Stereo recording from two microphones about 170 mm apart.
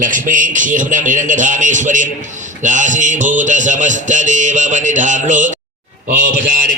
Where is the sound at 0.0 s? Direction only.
50° right (ahead or behind).